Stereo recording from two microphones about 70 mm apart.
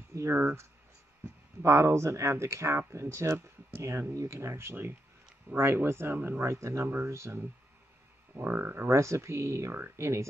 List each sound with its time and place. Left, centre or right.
0.3 s speech: right
4.4 s speech: right
6.4 s speech: right
8.4 s speech: right
8.8 s speech: right